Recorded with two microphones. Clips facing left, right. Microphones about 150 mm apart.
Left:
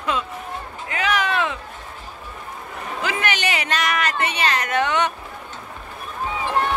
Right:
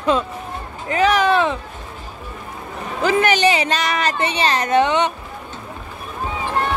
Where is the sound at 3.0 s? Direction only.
40° right (ahead or behind).